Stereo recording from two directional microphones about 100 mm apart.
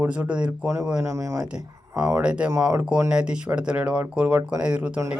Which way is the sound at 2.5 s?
30° right (ahead or behind).